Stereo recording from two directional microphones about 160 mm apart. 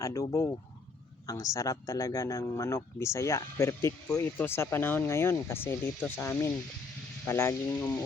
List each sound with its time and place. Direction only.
0.0 s speech: 20° left (ahead or behind)